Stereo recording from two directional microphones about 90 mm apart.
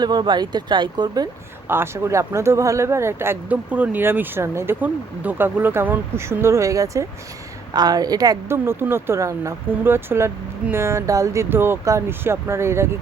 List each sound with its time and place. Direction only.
0.0 s speech: 55° right (ahead or behind)
1.6 s speech: 25° right (ahead or behind)
3.5 s speech: 15° right (ahead or behind); by 7.1 s 35° right (ahead or behind)
7.7 s a woman's voice: 50° right (ahead or behind)
8.4 s speech: 30° right (ahead or behind)